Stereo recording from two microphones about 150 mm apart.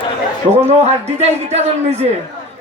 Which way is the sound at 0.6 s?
45° right (ahead or behind).